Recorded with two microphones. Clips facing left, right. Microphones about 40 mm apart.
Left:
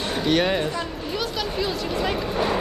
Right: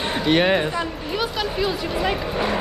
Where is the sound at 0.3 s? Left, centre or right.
Right.